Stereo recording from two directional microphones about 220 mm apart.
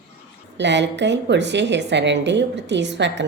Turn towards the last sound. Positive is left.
turn(degrees=-55)  # may be behind; listen again after turning